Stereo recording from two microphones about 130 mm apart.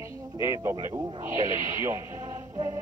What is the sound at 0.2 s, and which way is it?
Speech, 25° right (ahead or behind).